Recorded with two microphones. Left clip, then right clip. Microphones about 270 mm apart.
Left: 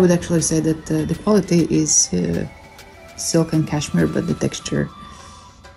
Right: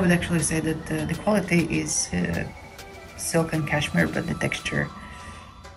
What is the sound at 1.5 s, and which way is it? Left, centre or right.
Speech, left.